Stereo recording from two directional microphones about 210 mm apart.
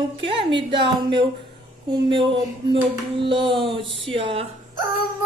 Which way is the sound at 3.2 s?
25° right (ahead or behind).